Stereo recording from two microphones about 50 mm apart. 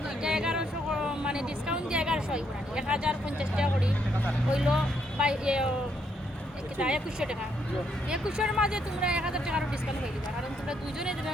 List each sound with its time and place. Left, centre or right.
0.2 s a sound: centre
4.5 s speech: centre
6.7 s speech: centre